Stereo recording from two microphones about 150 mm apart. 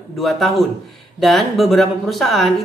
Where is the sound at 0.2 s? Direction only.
Centre (ahead or behind).